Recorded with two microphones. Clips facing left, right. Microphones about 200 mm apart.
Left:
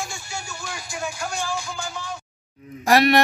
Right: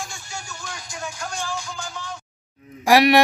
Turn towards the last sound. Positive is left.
turn(degrees=-15)  # may be behind; listen again after turning